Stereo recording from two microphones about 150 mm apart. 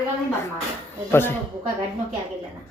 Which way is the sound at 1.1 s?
15° left (ahead or behind).